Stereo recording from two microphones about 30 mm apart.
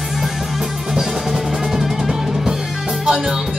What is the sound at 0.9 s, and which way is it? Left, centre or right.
Music, centre.